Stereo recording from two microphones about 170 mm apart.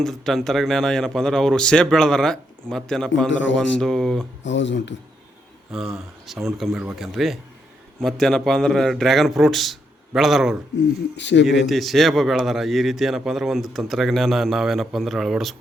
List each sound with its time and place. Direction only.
0.0 s a man's voice: centre (ahead or behind)
4.4 s speech: 90° left
5.7 s a man's voice: centre (ahead or behind)
11.2 s speech: 90° left
11.4 s a man's voice: centre (ahead or behind)